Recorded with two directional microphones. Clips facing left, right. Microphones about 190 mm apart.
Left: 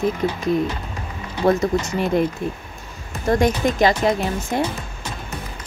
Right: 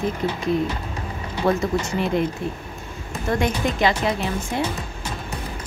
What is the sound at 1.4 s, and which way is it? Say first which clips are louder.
Speech: left 3 dB; 40° left (ahead or behind).